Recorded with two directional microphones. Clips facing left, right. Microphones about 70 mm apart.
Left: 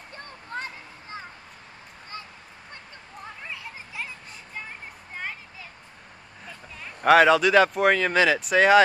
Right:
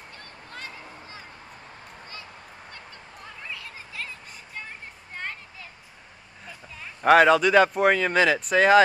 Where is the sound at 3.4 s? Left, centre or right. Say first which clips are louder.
Left 1 dB; left.